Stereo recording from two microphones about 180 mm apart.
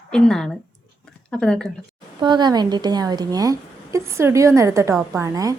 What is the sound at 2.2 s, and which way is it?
A woman's voice, 25° right (ahead or behind).